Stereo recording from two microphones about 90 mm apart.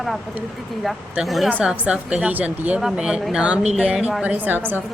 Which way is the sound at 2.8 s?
5° right (ahead or behind).